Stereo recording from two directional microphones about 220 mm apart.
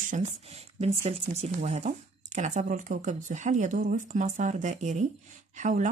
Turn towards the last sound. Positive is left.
turn(degrees=-35)  # may be behind; listen again after turning